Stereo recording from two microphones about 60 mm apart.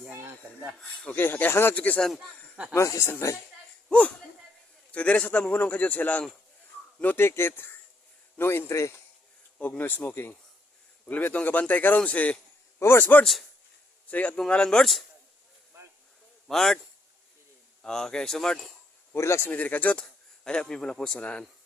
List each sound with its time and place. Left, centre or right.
0.1 s rub: right
0.8 s a man's voice: left
1.2 s a man's voice: left
2.1 s speech: centre
2.7 s speech: left
4.9 s a man's voice: left
9.6 s a man's voice: left
12.8 s a man's voice: left
14.3 s speech: centre
16.5 s speech: centre
17.8 s speech: centre
19.1 s speech: left
19.5 s a man's voice: left
20.0 s speech: centre